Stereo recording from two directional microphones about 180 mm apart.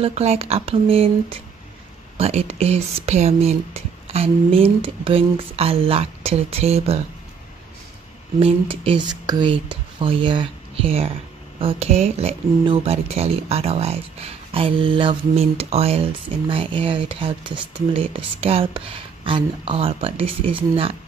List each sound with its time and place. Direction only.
0.0 s speech: 35° right (ahead or behind)
8.4 s speech: 30° right (ahead or behind)